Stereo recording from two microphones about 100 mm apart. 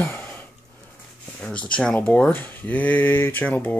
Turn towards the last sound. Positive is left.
turn(degrees=15)  # may be behind; listen again after turning